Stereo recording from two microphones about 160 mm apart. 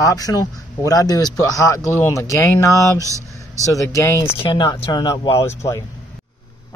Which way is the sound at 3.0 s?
20° right (ahead or behind).